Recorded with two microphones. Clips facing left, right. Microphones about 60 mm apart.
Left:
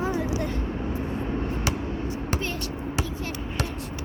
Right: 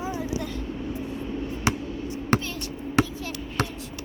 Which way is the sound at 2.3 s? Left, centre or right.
Right.